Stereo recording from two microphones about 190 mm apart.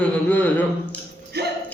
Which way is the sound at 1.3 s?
60° right (ahead or behind).